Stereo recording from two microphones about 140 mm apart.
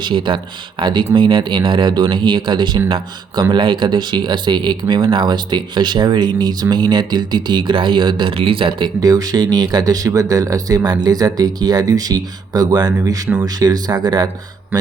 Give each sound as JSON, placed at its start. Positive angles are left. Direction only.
{"t": 0.0, "sound": "speech", "side_deg": -35}
{"t": 9.0, "sound": "speech", "side_deg": -25}